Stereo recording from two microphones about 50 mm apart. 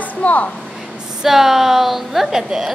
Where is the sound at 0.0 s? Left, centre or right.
Left.